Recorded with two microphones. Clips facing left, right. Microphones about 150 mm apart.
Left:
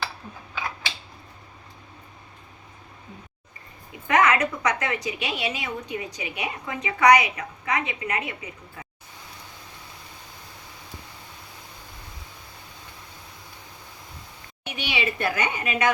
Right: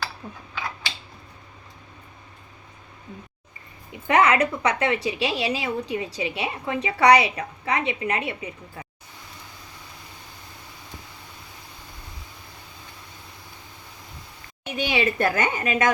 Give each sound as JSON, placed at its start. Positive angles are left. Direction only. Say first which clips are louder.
{"t": 4.0, "sound": "a woman's voice", "louder": "right 2 dB", "side_deg": -30}
{"t": 14.8, "sound": "a woman's voice", "louder": "right 5 dB", "side_deg": -45}